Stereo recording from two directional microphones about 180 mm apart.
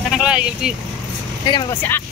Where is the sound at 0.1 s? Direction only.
5° right (ahead or behind).